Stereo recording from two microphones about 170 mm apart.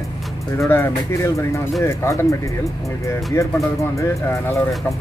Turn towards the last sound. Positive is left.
turn(degrees=15)  # may be behind; listen again after turning